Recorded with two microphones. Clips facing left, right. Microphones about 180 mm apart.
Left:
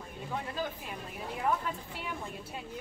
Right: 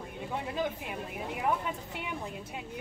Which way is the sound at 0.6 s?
15° right (ahead or behind).